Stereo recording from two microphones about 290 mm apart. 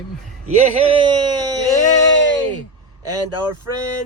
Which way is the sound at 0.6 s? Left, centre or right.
Centre.